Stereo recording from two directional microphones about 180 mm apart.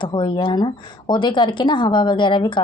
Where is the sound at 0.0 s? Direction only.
25° left (ahead or behind).